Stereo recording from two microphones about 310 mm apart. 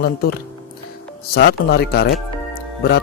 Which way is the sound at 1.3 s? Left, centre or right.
Left.